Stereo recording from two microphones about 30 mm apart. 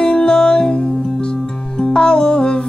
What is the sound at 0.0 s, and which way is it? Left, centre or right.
Music, left.